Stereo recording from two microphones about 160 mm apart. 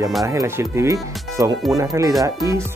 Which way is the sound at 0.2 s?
20° right (ahead or behind).